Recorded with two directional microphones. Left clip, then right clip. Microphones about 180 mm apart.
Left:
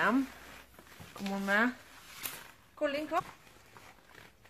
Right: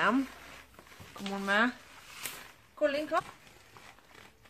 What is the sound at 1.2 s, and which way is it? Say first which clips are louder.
Speech: right 1 dB; 20° left (ahead or behind).